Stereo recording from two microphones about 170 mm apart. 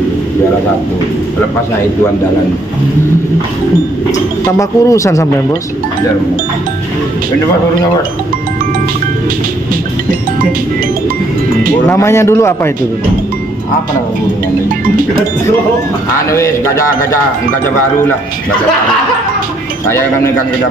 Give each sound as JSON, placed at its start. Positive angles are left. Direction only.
{"t": 4.5, "sound": "speech", "side_deg": 20}
{"t": 11.9, "sound": "speech", "side_deg": 15}
{"t": 16.3, "sound": "speech", "side_deg": 15}